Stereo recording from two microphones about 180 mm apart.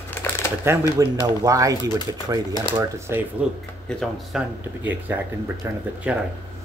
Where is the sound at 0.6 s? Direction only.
20° right (ahead or behind).